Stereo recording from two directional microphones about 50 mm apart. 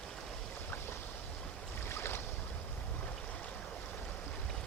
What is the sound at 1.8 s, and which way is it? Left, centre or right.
Boat, left.